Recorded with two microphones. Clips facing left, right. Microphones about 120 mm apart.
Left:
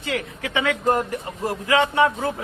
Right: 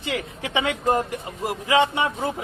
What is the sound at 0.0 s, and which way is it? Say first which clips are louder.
A man's voice: left 1 dB; 20° right (ahead or behind).